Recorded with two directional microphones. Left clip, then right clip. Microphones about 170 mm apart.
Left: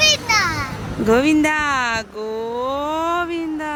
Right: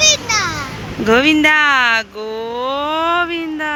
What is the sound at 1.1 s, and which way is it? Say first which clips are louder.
Speech: right 4 dB; 5° left (ahead or behind).